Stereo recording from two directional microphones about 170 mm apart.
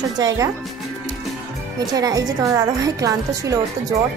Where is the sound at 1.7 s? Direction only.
20° right (ahead or behind).